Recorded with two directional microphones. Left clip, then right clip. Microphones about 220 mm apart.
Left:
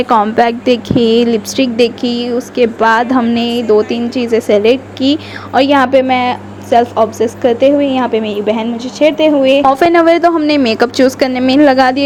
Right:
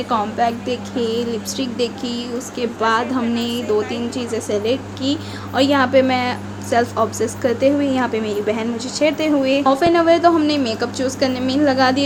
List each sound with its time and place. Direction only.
0.0 s speech: 30° left (ahead or behind); by 9.6 s 15° left (ahead or behind)
9.6 s a woman's voice: 35° left (ahead or behind)